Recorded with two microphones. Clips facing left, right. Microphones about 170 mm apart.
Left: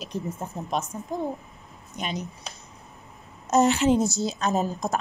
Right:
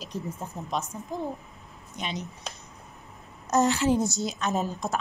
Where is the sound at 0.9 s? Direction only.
50° left (ahead or behind).